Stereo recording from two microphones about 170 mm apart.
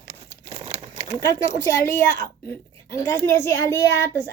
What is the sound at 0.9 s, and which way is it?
A child's voice, 20° left (ahead or behind).